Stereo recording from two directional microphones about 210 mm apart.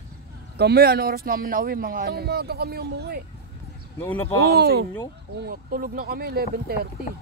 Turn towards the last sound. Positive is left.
turn(degrees=-50)  # may be behind; listen again after turning